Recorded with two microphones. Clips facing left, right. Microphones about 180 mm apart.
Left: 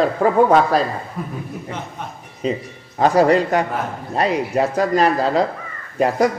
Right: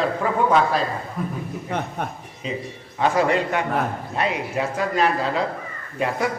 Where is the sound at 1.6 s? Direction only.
55° right (ahead or behind).